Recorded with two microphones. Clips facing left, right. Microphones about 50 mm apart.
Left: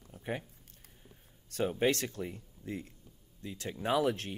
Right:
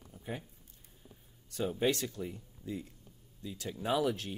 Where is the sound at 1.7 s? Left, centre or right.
Left.